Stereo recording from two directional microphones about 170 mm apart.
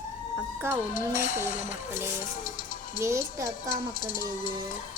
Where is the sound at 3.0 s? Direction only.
15° right (ahead or behind).